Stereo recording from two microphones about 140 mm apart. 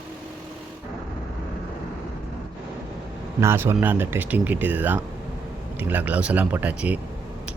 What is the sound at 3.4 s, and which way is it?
Speech, 20° right (ahead or behind).